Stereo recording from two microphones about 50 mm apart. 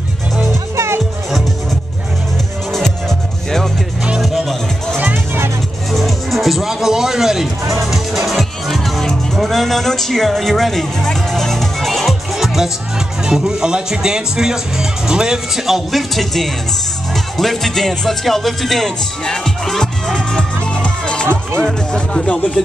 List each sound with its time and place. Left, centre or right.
0.7 s music: right
4.2 s music: centre
5.1 s music: right
5.9 s music: centre
13.2 s speech: centre
17.1 s music: centre
21.9 s speech: centre